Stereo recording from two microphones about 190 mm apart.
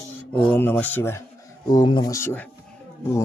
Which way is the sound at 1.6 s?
20° left (ahead or behind).